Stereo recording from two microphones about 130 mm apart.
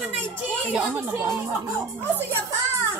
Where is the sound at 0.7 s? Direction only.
15° right (ahead or behind).